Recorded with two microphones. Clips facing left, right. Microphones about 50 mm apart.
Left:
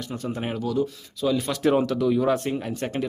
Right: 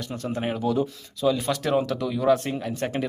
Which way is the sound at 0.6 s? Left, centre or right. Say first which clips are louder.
Even; right.